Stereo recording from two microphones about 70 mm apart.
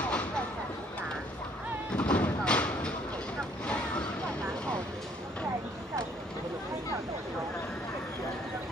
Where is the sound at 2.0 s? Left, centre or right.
Centre.